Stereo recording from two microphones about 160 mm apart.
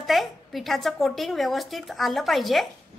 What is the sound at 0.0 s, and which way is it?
A woman's voice, centre (ahead or behind).